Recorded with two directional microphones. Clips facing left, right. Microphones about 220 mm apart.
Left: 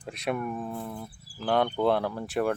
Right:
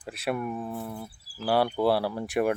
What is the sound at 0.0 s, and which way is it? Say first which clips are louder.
Speech: even; 5° right (ahead or behind).